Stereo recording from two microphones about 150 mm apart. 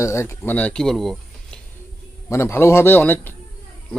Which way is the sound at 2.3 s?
15° left (ahead or behind).